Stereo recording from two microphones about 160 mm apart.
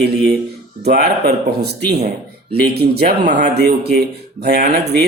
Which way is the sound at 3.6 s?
90° right.